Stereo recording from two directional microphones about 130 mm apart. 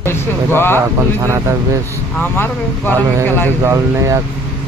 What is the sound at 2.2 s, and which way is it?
Speech, 15° left (ahead or behind).